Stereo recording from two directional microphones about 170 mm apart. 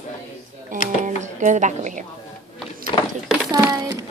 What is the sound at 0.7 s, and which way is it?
Speech, 50° right (ahead or behind).